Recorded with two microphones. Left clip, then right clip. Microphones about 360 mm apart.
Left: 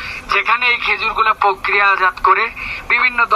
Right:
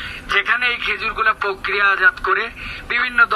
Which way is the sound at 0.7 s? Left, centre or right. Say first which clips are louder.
Left 5 dB; centre.